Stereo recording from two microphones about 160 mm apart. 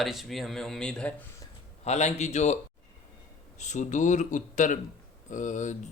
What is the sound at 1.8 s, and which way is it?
Speech, 45° left (ahead or behind).